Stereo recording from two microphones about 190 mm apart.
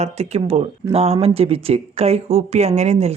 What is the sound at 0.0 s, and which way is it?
Speech, 35° right (ahead or behind).